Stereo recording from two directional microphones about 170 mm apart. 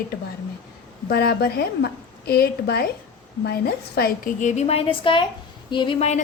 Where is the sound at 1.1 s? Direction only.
70° left (ahead or behind).